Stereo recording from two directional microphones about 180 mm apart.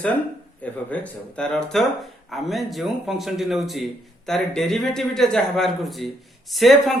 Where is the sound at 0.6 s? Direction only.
10° left (ahead or behind).